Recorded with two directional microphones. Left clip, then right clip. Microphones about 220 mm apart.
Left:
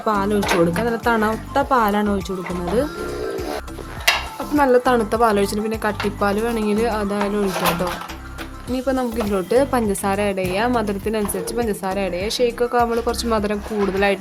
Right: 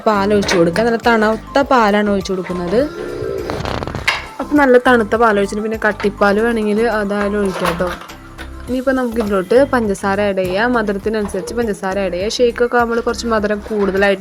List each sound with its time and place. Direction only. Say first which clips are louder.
0.0 s speech: right 6 dB; 15° right (ahead or behind)
4.5 s speech: right 5 dB; 15° right (ahead or behind)
8.7 s speech: right 5 dB; 15° right (ahead or behind)